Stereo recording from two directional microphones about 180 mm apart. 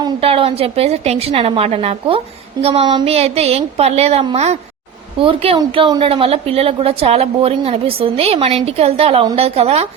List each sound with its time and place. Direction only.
0.0 s a woman's voice: 30° right (ahead or behind)